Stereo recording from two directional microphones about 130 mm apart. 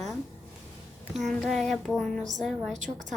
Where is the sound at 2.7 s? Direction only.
70° right (ahead or behind).